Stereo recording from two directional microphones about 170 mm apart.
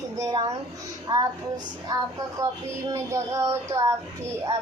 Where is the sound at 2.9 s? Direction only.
15° right (ahead or behind).